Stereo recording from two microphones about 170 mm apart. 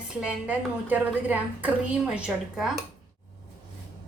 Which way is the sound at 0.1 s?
5° right (ahead or behind).